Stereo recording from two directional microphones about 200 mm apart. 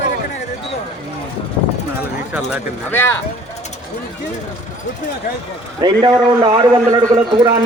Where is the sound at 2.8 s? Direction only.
10° left (ahead or behind).